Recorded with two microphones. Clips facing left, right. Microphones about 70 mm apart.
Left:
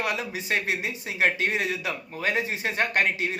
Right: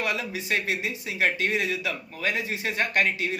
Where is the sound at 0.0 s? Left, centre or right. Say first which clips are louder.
Even; left.